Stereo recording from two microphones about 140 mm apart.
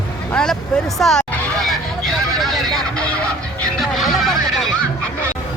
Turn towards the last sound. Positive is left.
turn(degrees=5)  # may be behind; listen again after turning